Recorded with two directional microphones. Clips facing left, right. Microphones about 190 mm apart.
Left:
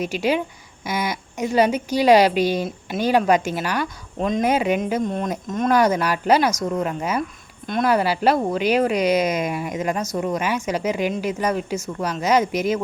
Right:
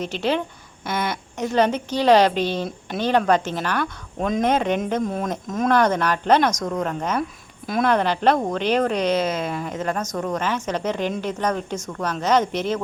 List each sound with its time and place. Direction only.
0.0 s speech: 10° left (ahead or behind)
5.0 s speech: centre (ahead or behind)